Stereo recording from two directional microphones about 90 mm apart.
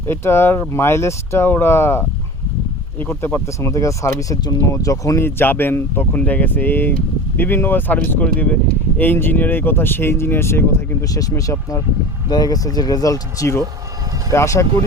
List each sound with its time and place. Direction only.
0.1 s speech: 25° left (ahead or behind)
5.2 s speech: 25° left (ahead or behind)
11.1 s speech: 40° left (ahead or behind)